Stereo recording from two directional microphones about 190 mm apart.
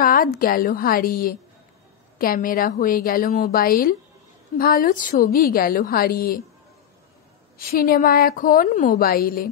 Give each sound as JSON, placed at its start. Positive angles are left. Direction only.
{"t": 0.0, "sound": "a sound", "side_deg": 45}
{"t": 0.4, "sound": "a woman's voice", "side_deg": 50}
{"t": 7.5, "sound": "a woman's voice", "side_deg": 50}